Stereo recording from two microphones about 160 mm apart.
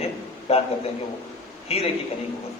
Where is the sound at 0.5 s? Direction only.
40° left (ahead or behind).